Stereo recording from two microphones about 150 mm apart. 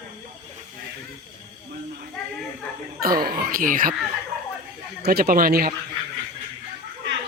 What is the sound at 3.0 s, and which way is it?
Speech, 80° right.